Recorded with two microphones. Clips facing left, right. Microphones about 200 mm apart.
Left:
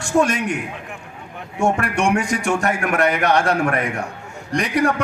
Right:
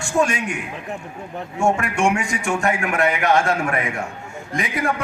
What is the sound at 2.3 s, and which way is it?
A man's voice, 40° left (ahead or behind).